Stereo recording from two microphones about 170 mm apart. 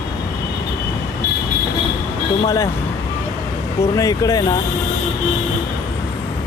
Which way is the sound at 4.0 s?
20° left (ahead or behind).